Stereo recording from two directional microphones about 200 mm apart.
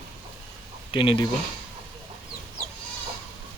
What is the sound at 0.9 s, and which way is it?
Speech, 25° left (ahead or behind).